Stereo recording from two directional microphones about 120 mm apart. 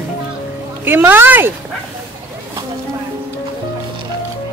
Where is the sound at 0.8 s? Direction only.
15° right (ahead or behind).